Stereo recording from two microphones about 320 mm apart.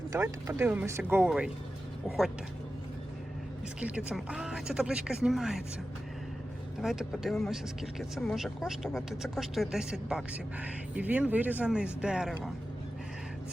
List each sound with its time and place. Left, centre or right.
0.1 s speech: centre
3.8 s speech: centre
6.8 s speech: centre